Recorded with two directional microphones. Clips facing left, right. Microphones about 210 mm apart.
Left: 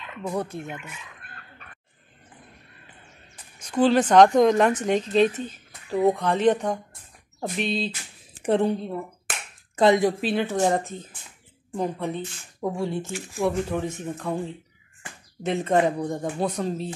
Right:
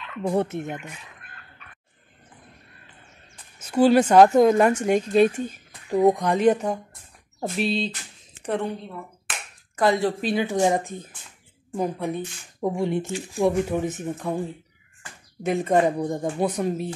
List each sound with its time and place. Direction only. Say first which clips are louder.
0.3 s speech: right 5 dB; 25° right (ahead or behind)
0.7 s speech: right 4 dB; 40° right (ahead or behind)
3.5 s a woman's voice: right 3 dB; 5° right (ahead or behind)
8.5 s speech: left 5 dB; 30° left (ahead or behind)
9.8 s speech: left 3 dB; 20° left (ahead or behind)
10.2 s speech: right 1 dB; centre (ahead or behind)
10.5 s a woman's voice: right 1 dB; 15° right (ahead or behind)